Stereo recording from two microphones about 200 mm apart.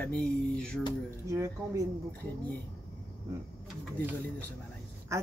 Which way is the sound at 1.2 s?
15° right (ahead or behind).